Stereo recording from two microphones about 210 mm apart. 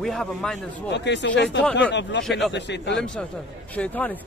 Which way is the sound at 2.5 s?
55° left (ahead or behind).